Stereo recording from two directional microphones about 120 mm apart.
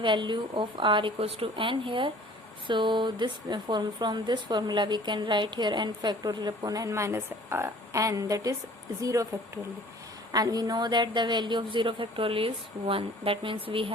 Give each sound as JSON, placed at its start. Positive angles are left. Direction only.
{"t": 0.0, "sound": "speech", "side_deg": -40}
{"t": 10.3, "sound": "speech", "side_deg": -35}